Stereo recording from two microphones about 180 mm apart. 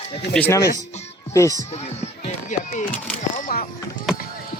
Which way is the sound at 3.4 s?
55° left (ahead or behind).